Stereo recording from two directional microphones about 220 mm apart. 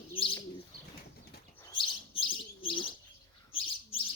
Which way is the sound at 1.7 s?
20° left (ahead or behind).